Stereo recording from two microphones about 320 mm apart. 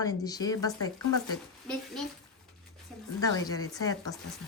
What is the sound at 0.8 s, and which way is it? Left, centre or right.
Speech, left.